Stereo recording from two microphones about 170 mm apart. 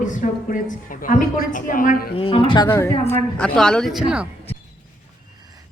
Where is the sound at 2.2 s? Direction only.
30° left (ahead or behind).